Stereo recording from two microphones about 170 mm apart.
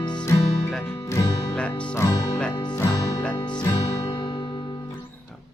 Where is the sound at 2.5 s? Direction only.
25° left (ahead or behind).